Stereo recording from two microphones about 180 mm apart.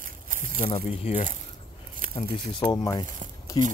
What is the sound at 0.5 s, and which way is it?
Speech, 35° left (ahead or behind).